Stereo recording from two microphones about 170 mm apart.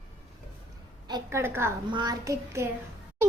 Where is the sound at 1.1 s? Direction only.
25° right (ahead or behind).